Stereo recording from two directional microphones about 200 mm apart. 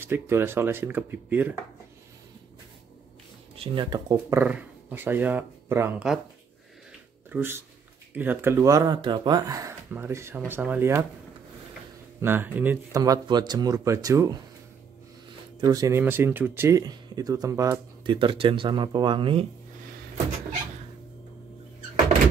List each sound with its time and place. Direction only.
0.0 s speech: 10° right (ahead or behind)
3.5 s speech: 25° right (ahead or behind)
4.4 s speech: 5° right (ahead or behind)
7.2 s speech: 10° right (ahead or behind)
12.2 s speech: 10° right (ahead or behind)
15.6 s speech: 15° right (ahead or behind)